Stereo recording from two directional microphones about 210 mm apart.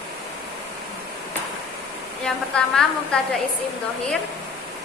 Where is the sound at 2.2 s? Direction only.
5° left (ahead or behind).